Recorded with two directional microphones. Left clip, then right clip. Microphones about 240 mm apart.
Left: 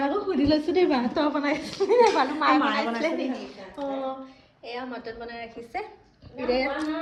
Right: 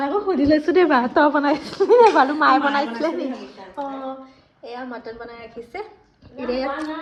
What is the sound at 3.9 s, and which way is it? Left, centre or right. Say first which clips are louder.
Speech: left 3 dB; right.